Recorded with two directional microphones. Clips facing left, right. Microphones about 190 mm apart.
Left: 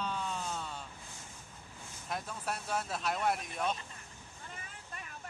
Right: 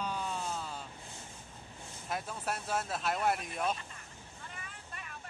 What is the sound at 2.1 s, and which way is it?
Speech, 5° right (ahead or behind).